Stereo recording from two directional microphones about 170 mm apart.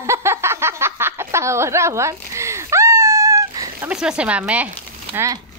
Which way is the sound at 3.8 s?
5° right (ahead or behind).